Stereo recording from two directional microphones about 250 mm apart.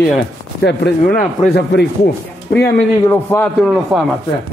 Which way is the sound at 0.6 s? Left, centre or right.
Left.